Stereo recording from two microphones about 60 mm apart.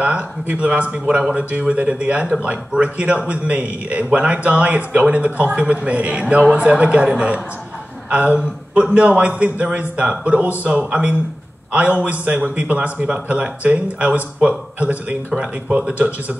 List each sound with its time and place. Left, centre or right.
0.0 s a man's voice: right